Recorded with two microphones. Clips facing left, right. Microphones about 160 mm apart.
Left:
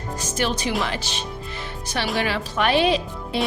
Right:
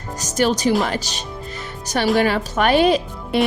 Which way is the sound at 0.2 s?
40° right (ahead or behind).